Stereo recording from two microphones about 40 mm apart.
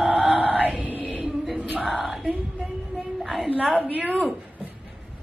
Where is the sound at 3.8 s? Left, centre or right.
Right.